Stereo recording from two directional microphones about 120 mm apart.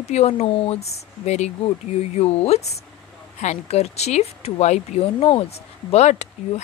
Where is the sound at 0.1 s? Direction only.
60° left (ahead or behind).